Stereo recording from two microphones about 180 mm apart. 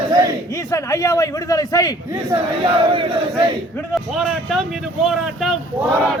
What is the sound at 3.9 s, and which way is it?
Speech, centre (ahead or behind).